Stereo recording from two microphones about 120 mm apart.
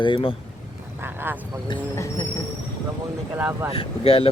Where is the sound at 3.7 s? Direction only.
50° left (ahead or behind).